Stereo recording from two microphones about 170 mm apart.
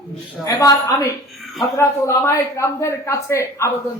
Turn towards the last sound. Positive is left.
turn(degrees=15)  # may be behind; listen again after turning